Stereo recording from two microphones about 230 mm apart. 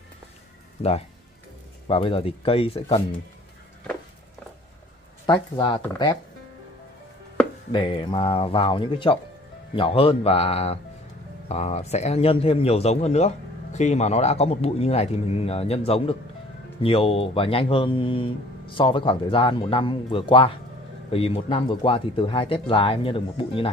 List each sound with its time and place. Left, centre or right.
1.9 s speech: left
5.2 s speech: centre
7.7 s speech: left